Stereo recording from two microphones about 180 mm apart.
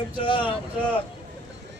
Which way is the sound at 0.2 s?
25° left (ahead or behind).